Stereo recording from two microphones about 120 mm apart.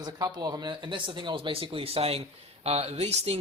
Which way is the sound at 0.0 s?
35° right (ahead or behind).